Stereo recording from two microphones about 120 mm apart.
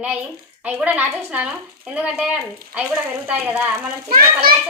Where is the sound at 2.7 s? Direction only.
10° right (ahead or behind).